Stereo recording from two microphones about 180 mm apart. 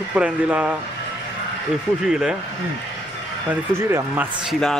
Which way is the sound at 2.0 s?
5° right (ahead or behind).